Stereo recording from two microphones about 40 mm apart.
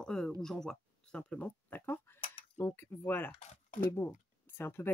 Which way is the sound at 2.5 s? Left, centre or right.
Left.